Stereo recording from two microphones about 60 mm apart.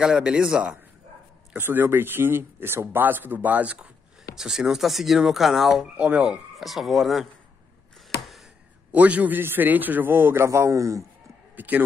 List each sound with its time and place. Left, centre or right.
0.1 s a man's voice: centre
1.6 s speech: right
4.4 s speech: centre
5.9 s a man's voice: centre
6.5 s speech: centre
8.9 s a man's voice: right
11.5 s speech: right